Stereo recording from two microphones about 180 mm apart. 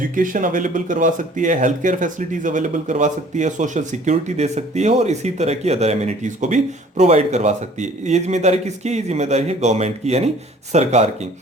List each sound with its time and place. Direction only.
0.2 s speech: 50° right (ahead or behind)